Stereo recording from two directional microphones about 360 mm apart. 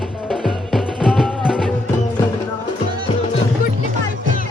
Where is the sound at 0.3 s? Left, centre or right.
Centre.